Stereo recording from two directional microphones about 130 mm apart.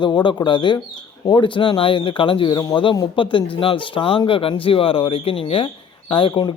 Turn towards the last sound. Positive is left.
turn(degrees=40)  # may be behind; listen again after turning